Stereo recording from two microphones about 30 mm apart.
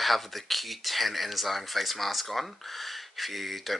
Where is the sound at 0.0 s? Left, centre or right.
Centre.